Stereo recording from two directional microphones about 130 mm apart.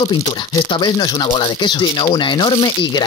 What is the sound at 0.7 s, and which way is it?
Speech, 35° left (ahead or behind).